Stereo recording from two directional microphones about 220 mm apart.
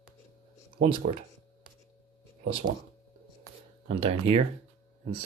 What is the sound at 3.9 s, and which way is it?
Speech, 25° right (ahead or behind).